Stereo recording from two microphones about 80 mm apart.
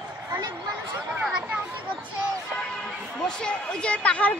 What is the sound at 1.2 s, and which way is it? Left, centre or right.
Speech, centre.